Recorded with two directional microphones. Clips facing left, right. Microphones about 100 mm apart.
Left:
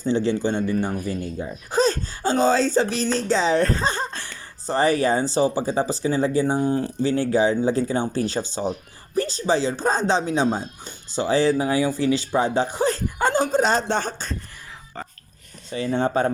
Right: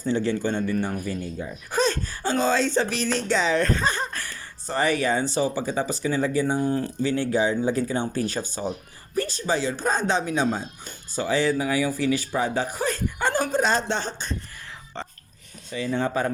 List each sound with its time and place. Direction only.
0.0 s speech: 25° left (ahead or behind); by 14.2 s 50° left (ahead or behind)
15.0 s music: 5° left (ahead or behind)
15.7 s speech: 35° left (ahead or behind)